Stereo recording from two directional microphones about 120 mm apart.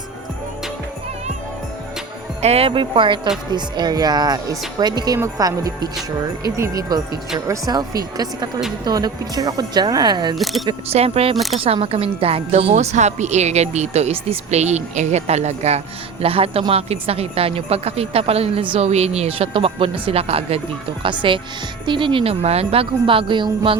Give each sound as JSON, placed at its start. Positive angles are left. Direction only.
{"t": 2.4, "sound": "speech", "side_deg": -60}
{"t": 10.3, "sound": "speech", "side_deg": 0}
{"t": 10.8, "sound": "a woman's voice", "side_deg": -60}
{"t": 16.2, "sound": "a woman's voice", "side_deg": -55}
{"t": 18.9, "sound": "speech", "side_deg": -60}
{"t": 21.0, "sound": "speech", "side_deg": -45}